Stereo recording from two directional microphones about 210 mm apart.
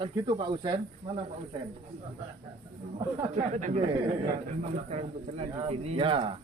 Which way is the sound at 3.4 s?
35° right (ahead or behind).